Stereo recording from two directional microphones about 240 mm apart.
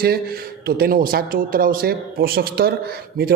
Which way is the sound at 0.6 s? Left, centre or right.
Right.